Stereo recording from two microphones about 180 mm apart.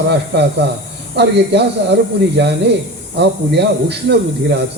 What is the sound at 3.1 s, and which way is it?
A man's voice, 70° right (ahead or behind).